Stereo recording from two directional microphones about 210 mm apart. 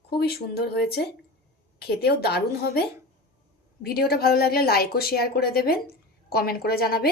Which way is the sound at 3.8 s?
45° left (ahead or behind).